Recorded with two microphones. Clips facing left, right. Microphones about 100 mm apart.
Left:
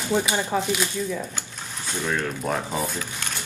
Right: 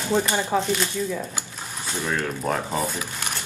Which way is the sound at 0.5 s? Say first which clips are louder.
Right 2 dB; 5° left (ahead or behind).